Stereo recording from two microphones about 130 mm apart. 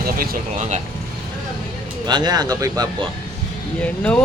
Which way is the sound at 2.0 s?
35° right (ahead or behind).